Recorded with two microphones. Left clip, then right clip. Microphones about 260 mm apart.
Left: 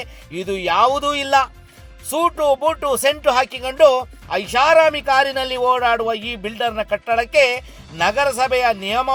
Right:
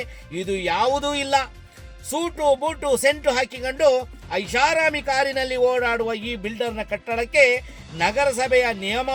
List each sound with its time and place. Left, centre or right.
0.0 s speech: centre